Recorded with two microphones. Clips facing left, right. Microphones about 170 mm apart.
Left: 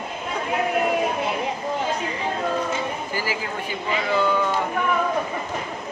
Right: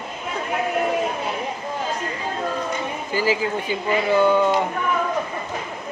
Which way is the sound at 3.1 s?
20° right (ahead or behind).